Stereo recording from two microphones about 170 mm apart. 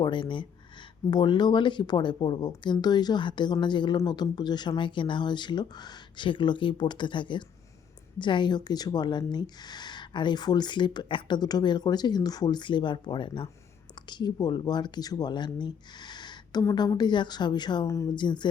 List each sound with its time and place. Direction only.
0.0 s speech: 30° left (ahead or behind)